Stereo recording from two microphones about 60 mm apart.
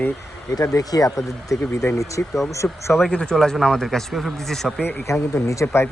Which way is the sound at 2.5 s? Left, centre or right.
Left.